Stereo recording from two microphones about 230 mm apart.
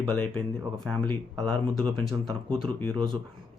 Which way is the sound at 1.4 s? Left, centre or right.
Centre.